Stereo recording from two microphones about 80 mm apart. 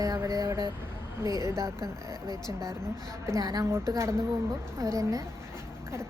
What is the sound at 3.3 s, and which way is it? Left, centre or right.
Speech, right.